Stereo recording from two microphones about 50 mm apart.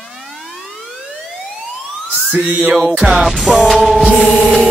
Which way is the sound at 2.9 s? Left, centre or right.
Centre.